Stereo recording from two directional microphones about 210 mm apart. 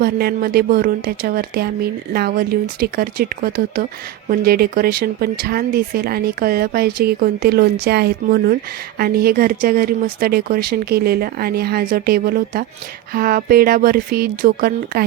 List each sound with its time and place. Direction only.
0.0 s speech: 45° right (ahead or behind)